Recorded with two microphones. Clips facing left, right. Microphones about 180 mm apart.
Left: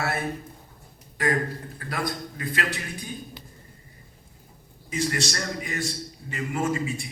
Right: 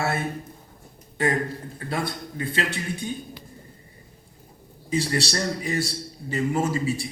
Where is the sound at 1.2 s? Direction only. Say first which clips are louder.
Right 1 dB; 25° right (ahead or behind).